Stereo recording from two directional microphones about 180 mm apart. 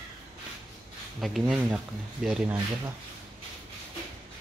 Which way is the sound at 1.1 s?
Centre (ahead or behind).